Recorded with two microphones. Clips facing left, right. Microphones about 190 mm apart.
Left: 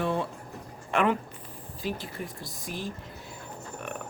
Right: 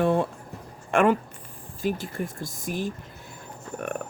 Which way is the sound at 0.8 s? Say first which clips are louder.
Right 5 dB; 45° right (ahead or behind).